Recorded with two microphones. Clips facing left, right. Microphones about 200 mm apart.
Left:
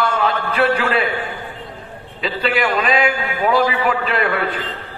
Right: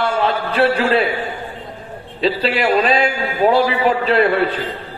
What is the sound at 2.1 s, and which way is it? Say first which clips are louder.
A man's voice: right 2 dB; 30° right (ahead or behind).